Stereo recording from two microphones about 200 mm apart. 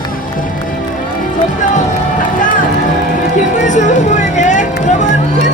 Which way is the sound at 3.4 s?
40° left (ahead or behind).